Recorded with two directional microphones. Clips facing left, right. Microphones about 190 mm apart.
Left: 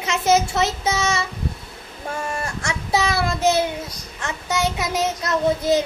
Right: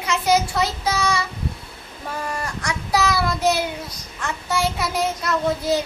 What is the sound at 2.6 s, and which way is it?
A child's voice, 25° left (ahead or behind).